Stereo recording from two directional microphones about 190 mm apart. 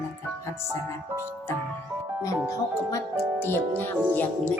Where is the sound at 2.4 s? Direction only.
15° left (ahead or behind).